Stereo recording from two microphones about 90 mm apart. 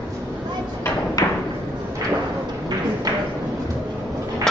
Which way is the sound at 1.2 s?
45° left (ahead or behind).